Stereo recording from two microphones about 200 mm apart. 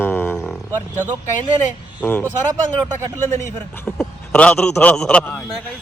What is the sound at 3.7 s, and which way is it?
A man's voice, 5° left (ahead or behind).